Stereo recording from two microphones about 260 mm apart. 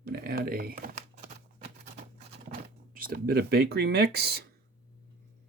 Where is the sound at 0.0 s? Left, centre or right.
Right.